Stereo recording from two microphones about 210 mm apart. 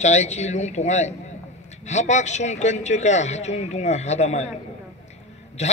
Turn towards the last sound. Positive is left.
turn(degrees=30)  # may be behind; listen again after turning